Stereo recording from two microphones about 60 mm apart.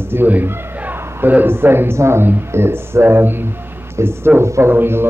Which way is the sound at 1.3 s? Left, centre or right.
Right.